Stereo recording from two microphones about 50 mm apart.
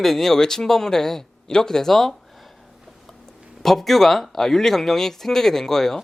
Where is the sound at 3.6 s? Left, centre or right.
Centre.